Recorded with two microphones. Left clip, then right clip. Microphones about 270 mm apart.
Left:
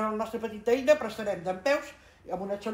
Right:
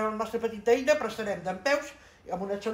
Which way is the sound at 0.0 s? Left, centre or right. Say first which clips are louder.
Right 1 dB; right.